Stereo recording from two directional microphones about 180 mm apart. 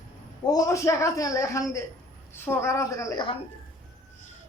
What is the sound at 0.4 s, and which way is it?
A man's voice, 20° left (ahead or behind).